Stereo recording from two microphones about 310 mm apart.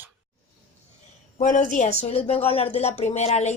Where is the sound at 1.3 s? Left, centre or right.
Left.